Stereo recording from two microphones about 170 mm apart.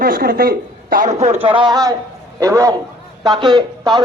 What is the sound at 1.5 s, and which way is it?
A man's voice, 25° right (ahead or behind).